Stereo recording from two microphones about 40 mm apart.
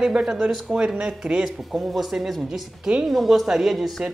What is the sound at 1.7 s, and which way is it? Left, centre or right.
A woman's voice, centre.